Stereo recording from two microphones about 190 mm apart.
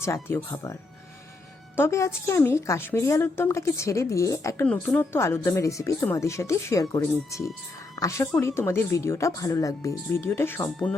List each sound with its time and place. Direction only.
0.0 s a woman's voice: 15° left (ahead or behind)